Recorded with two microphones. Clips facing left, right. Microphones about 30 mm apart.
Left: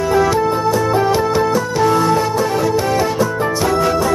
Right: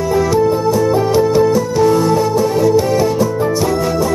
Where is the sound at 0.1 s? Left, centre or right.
Left.